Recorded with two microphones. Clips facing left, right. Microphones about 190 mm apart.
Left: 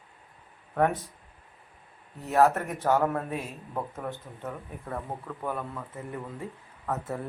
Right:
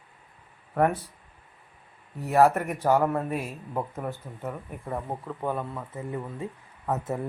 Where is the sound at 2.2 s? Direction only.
10° right (ahead or behind).